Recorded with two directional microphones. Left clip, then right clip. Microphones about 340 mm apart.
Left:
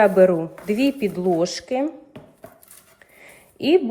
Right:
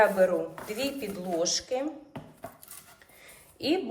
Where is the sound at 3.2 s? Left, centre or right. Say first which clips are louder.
Left 8 dB; left.